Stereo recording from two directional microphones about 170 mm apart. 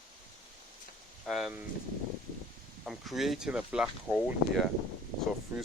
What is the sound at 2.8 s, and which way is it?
Speech, centre (ahead or behind).